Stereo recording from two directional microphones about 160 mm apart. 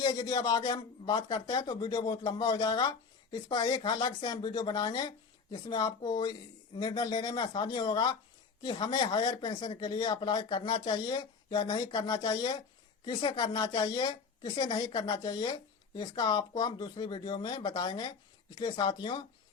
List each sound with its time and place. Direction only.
0.0 s a woman's voice: 25° left (ahead or behind)